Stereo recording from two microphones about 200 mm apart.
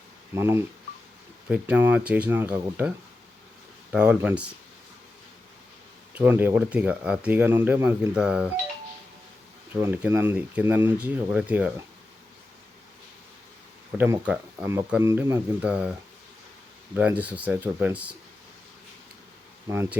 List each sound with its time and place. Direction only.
0.3 s speech: 10° right (ahead or behind)
3.9 s speech: 5° right (ahead or behind)
6.1 s speech: 10° right (ahead or behind)
9.8 s speech: 10° right (ahead or behind)
14.0 s speech: 10° right (ahead or behind)
19.6 s speech: 15° right (ahead or behind)